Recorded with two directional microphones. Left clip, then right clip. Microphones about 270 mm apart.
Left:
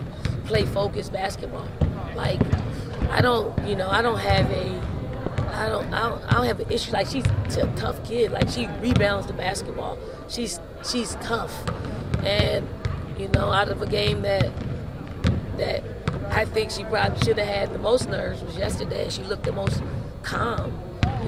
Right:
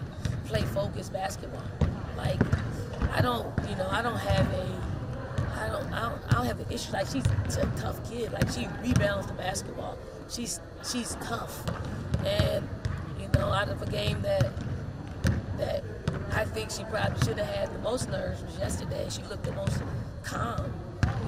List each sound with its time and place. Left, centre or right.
0.5 s speech: left